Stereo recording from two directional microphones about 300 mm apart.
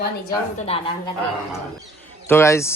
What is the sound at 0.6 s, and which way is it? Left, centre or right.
Speech, centre.